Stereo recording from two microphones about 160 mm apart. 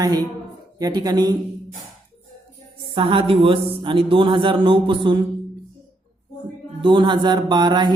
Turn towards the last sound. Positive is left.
turn(degrees=-30)  # may be behind; listen again after turning